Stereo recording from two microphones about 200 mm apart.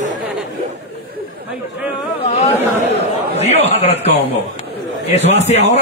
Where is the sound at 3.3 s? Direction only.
35° left (ahead or behind).